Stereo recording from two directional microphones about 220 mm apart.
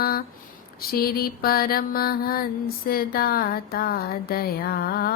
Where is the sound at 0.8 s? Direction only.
45° left (ahead or behind).